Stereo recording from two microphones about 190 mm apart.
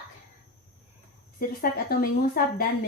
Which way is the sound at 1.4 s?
50° left (ahead or behind).